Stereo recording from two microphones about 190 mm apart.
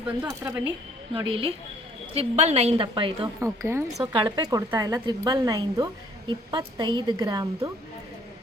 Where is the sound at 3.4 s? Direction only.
15° right (ahead or behind).